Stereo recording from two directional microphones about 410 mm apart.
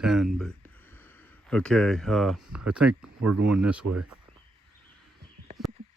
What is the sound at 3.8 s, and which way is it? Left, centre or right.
Speech, right.